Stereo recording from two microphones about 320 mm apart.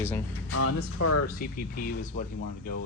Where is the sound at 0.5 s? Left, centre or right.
Left.